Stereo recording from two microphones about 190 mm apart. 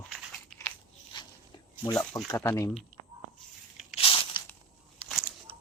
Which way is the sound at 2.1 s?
15° left (ahead or behind).